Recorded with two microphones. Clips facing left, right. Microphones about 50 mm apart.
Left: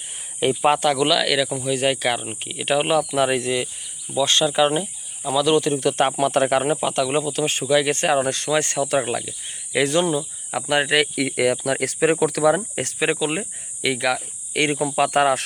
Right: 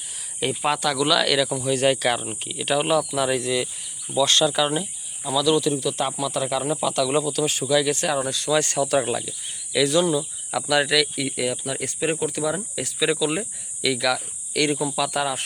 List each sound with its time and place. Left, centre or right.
0.3 s speech: left
1.0 s speech: centre
2.4 s speech: left
3.5 s insect: centre
4.5 s speech: left
6.7 s speech: left
7.4 s speech: left
8.4 s speech: left
9.0 s speech: centre
9.7 s speech: left
11.1 s speech: left
13.1 s speech: left